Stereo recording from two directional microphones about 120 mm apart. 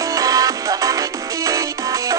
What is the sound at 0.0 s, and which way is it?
Music, 30° right (ahead or behind).